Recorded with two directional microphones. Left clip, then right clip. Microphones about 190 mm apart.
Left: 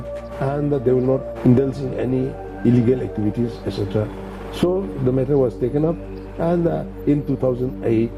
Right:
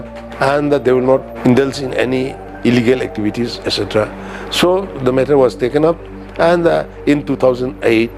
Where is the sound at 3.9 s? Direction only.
15° right (ahead or behind).